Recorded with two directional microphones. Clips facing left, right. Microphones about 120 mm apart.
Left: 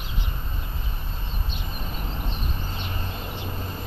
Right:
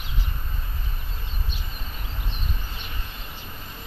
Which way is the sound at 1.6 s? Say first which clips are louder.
Left 5 dB; 35° left (ahead or behind).